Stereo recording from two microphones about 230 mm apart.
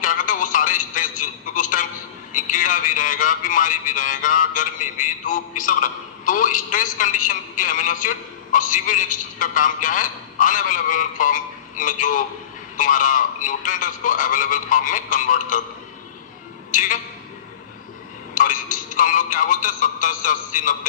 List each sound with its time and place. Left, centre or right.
0.0 s telephone: left
2.3 s a man's voice: left
16.7 s a man's voice: left
18.3 s a man's voice: left